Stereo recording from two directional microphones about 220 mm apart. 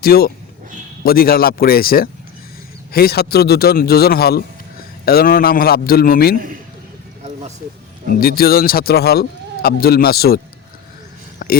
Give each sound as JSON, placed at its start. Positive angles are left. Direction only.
{"t": 0.0, "sound": "a man's voice", "side_deg": 45}
{"t": 8.1, "sound": "a man's voice", "side_deg": 45}
{"t": 11.4, "sound": "a sound", "side_deg": 40}